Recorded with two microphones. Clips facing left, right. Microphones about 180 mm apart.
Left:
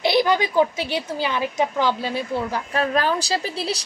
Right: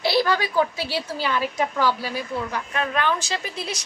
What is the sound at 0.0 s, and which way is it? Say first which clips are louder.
A woman's voice: left 3 dB; 20° left (ahead or behind).